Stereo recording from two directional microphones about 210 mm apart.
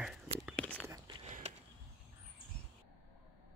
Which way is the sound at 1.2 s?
30° right (ahead or behind).